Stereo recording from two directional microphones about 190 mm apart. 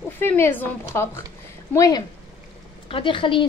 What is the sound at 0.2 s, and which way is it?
A woman's voice, 10° left (ahead or behind).